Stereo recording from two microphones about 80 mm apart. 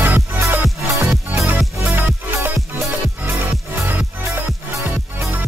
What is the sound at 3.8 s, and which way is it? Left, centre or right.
Music, right.